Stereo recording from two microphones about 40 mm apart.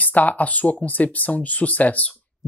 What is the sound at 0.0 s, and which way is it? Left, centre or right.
Speech, left.